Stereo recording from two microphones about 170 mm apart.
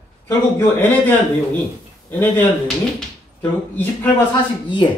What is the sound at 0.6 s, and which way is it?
Speech, 10° left (ahead or behind).